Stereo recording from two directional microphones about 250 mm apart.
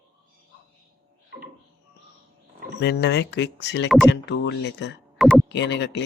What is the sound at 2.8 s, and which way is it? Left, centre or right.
A man's voice, left.